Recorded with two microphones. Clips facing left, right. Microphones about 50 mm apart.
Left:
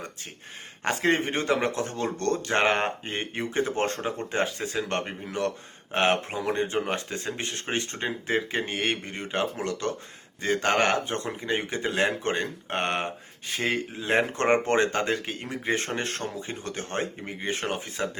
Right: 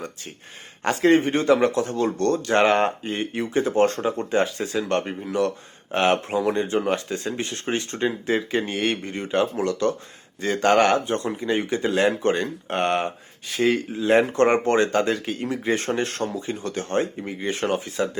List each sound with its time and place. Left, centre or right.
0.9 s speech: left
3.0 s speech: left
14.1 s speech: left